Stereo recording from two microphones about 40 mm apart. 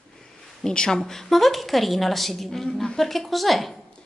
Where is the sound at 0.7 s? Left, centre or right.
Centre.